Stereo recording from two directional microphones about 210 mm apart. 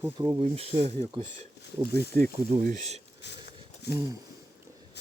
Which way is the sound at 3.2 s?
55° left (ahead or behind).